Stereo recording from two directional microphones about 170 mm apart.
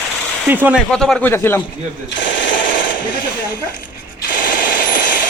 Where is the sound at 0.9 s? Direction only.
5° left (ahead or behind).